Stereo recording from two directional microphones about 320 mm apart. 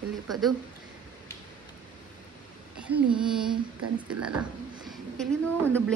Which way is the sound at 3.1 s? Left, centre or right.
Centre.